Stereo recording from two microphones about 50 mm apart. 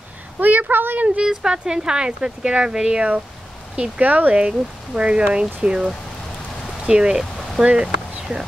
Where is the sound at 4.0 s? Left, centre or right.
Right.